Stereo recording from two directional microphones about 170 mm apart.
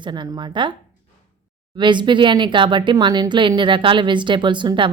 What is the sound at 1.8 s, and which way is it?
Speech, 25° right (ahead or behind).